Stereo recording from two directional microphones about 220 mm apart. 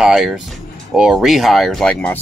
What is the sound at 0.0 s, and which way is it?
Speech, centre (ahead or behind).